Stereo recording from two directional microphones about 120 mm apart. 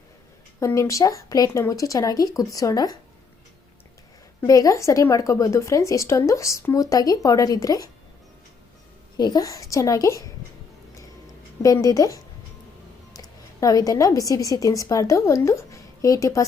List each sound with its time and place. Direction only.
0.6 s a woman's voice: 25° left (ahead or behind)
4.4 s a woman's voice: 30° left (ahead or behind)
9.1 s a woman's voice: 35° left (ahead or behind)
11.6 s a woman's voice: 30° left (ahead or behind)